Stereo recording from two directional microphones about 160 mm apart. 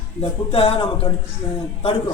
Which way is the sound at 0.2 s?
35° left (ahead or behind).